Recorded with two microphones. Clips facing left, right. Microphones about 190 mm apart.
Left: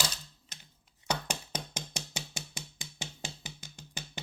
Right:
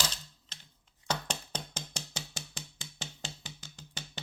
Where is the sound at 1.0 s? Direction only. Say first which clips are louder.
Left 1 dB; 10° left (ahead or behind).